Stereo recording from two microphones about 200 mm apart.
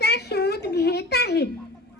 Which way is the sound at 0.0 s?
55° left (ahead or behind).